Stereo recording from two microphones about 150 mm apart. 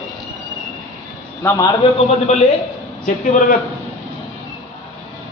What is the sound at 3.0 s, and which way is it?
Speech, 60° left (ahead or behind).